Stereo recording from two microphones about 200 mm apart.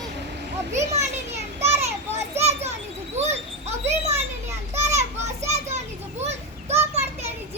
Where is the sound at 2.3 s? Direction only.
35° right (ahead or behind).